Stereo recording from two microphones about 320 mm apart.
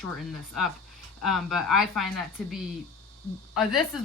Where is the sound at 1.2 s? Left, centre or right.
Centre.